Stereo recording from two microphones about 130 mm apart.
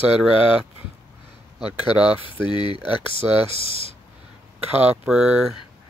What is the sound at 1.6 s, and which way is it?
Speech, 10° right (ahead or behind).